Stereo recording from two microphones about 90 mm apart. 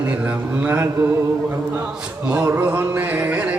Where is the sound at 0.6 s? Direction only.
25° right (ahead or behind).